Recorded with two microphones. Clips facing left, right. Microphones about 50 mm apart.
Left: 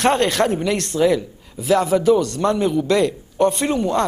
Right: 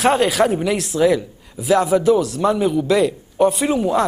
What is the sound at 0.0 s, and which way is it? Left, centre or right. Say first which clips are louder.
Speech: right 1 dB; centre.